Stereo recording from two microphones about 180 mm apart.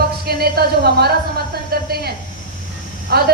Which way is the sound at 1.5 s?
60° right (ahead or behind).